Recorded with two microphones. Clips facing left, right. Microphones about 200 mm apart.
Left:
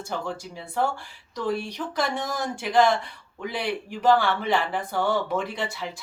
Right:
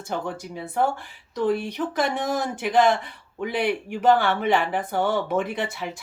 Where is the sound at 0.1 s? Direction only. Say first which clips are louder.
Right 3 dB; 55° right (ahead or behind).